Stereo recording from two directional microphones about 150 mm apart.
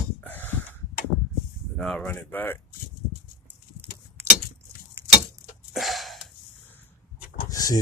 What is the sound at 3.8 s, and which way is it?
Keys jangling, 15° right (ahead or behind).